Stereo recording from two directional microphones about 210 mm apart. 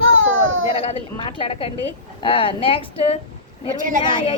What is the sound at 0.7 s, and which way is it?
A woman's voice, 25° left (ahead or behind).